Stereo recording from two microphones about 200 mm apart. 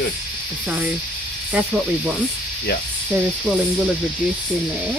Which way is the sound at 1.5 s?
5° right (ahead or behind).